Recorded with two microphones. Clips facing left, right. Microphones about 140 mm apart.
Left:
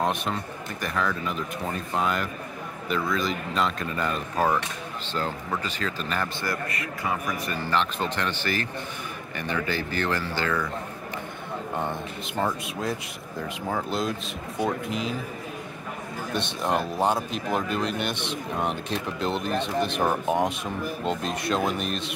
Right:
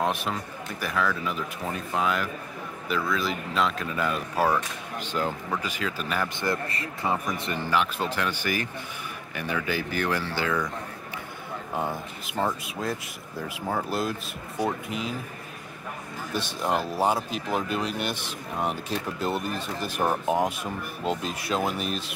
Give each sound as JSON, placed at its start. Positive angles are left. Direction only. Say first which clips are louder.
{"t": 0.0, "sound": "speech", "louder": "left 1 dB", "side_deg": 0}
{"t": 6.4, "sound": "a man's voice", "louder": "right 2 dB", "side_deg": -25}
{"t": 7.7, "sound": "speech", "louder": "even", "side_deg": -5}
{"t": 11.7, "sound": "speech", "louder": "right 1 dB", "side_deg": -5}
{"t": 16.6, "sound": "speech", "louder": "even", "side_deg": -5}